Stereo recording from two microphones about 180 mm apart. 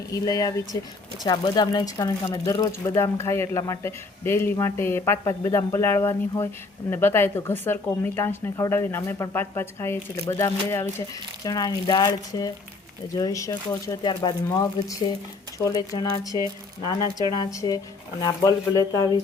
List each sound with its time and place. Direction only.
0.1 s speech: 20° left (ahead or behind)
17.3 s speech: 20° left (ahead or behind)